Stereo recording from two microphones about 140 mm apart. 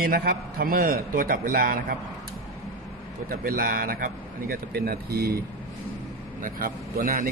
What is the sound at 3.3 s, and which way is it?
A man's voice, 90° right.